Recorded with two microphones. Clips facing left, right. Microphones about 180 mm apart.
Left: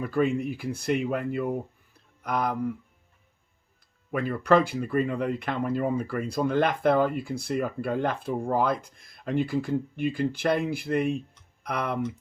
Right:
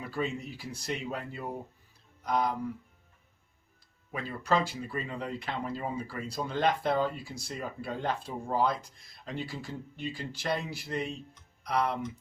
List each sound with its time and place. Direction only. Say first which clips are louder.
0.0 s speech: left 9 dB; 55° left (ahead or behind)
4.1 s speech: left 8 dB; 60° left (ahead or behind)